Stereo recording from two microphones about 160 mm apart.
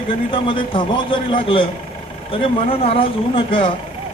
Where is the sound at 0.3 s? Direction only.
35° left (ahead or behind).